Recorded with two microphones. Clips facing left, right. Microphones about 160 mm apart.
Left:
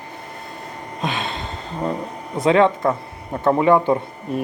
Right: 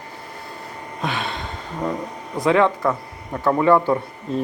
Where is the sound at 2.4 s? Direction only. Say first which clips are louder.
Left 2 dB; 20° left (ahead or behind).